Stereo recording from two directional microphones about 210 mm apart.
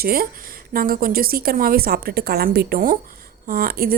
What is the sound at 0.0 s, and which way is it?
A woman's voice, 45° right (ahead or behind).